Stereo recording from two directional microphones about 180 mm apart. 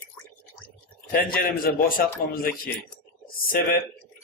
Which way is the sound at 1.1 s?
55° left (ahead or behind).